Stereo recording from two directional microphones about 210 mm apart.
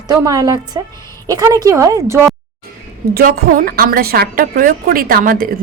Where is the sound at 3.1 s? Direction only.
45° right (ahead or behind).